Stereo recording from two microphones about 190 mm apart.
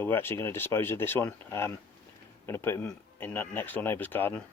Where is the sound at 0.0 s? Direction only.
10° left (ahead or behind).